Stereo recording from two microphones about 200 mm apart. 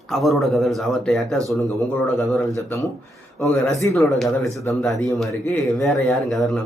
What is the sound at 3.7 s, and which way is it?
Speech, 15° left (ahead or behind).